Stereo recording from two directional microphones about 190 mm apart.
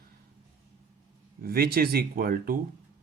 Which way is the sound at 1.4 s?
55° right (ahead or behind).